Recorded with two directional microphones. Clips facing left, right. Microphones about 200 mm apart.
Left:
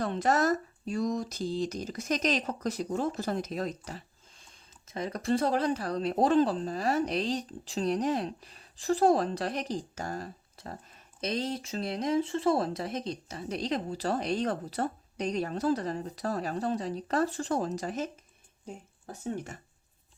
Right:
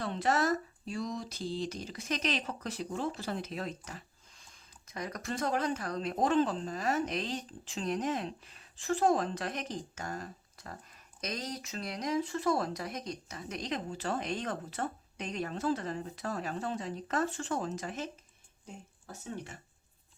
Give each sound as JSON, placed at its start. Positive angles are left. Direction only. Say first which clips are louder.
{"t": 0.0, "sound": "speech", "louder": "left 4 dB", "side_deg": 45}